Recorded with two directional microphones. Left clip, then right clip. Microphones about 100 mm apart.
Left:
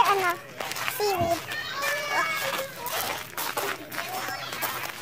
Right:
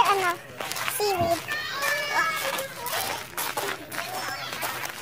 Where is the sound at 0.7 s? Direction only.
10° right (ahead or behind).